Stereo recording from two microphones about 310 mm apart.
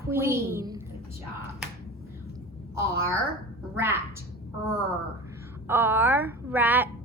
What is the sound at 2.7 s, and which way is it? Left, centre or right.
Speech, centre.